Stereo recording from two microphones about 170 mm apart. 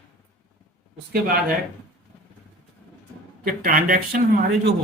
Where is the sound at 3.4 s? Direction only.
55° right (ahead or behind).